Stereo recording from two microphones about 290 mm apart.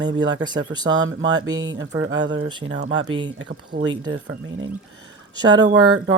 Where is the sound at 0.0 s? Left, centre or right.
Right.